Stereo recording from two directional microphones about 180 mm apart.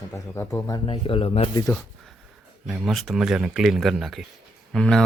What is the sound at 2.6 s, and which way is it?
Speech, centre (ahead or behind).